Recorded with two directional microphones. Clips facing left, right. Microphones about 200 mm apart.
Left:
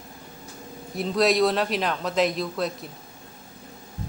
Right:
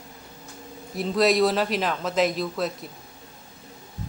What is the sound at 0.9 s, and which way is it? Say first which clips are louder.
Speech: right 1 dB; centre (ahead or behind).